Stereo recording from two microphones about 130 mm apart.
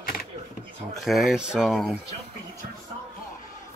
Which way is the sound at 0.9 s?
Centre (ahead or behind).